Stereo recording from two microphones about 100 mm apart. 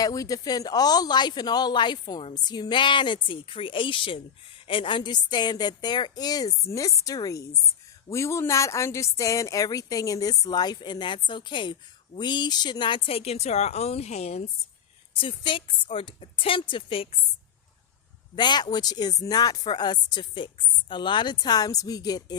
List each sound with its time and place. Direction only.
0.0 s a woman's voice: 35° left (ahead or behind); by 14.4 s 90° left
15.1 s a woman's voice: 60° left (ahead or behind)
18.3 s speech: 45° left (ahead or behind)